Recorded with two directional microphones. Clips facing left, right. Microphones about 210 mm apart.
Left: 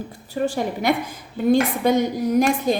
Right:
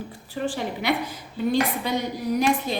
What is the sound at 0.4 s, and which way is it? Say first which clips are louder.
A woman's voice: left 4 dB; 45° left (ahead or behind).